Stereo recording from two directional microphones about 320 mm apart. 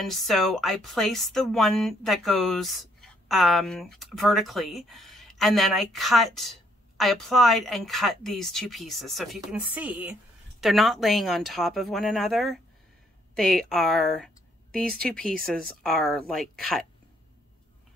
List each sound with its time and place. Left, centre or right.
0.0 s a woman's voice: centre